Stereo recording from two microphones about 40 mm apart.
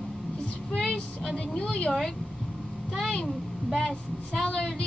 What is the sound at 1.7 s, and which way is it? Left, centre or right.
Speech, left.